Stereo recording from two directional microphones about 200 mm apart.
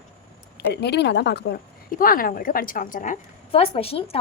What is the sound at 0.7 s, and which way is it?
Speech, 55° left (ahead or behind).